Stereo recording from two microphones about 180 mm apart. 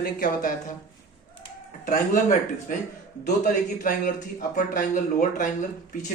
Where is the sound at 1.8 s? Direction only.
50° left (ahead or behind).